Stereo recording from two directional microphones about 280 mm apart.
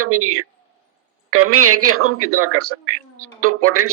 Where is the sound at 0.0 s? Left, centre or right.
Right.